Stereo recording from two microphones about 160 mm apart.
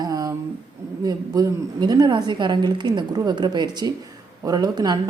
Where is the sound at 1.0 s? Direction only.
25° right (ahead or behind).